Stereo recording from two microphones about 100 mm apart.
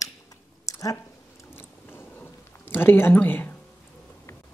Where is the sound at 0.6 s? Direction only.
35° left (ahead or behind).